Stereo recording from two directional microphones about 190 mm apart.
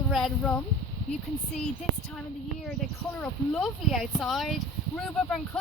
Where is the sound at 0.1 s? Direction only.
5° left (ahead or behind).